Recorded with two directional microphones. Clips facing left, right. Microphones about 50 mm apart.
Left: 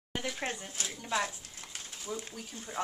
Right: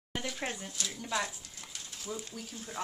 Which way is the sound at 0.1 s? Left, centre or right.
Centre.